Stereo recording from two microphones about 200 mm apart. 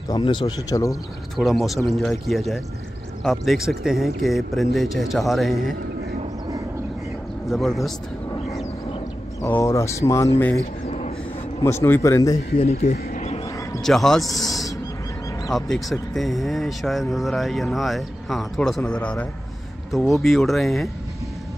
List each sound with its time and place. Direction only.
0.1 s speech: 20° left (ahead or behind)
1.3 s speech: centre (ahead or behind)
7.4 s speech: centre (ahead or behind)
9.4 s speech: 15° left (ahead or behind)
10.9 s a sound: 35° left (ahead or behind)
11.8 s speech: 15° left (ahead or behind)
12.5 s speech: 30° left (ahead or behind)
12.9 s a sound: 35° left (ahead or behind)
13.8 s speech: centre (ahead or behind)